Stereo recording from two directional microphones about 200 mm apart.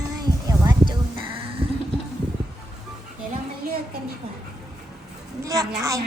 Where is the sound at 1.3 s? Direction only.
25° right (ahead or behind).